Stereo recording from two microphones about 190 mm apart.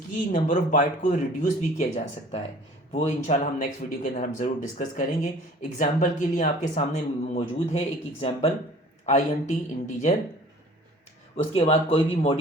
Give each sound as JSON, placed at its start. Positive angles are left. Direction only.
{"t": 0.3, "sound": "speech", "side_deg": 40}
{"t": 2.9, "sound": "speech", "side_deg": 40}
{"t": 11.5, "sound": "speech", "side_deg": 30}